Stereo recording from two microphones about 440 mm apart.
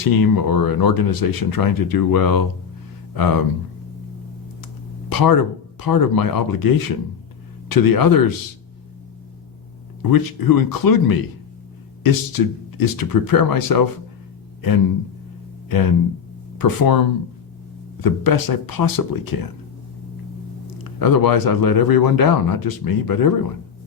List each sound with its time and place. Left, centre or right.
0.0 s speech: left
4.6 s speech: left
10.0 s speech: left
15.7 s speech: left
20.7 s speech: left